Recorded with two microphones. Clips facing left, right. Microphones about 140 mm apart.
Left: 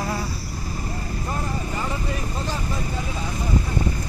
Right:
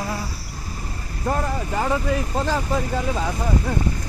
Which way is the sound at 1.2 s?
60° right (ahead or behind).